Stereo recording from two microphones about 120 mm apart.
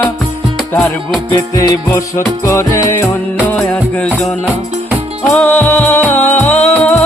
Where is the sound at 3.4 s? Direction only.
10° left (ahead or behind).